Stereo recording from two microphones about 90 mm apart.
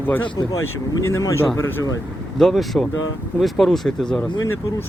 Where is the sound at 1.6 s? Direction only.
25° left (ahead or behind).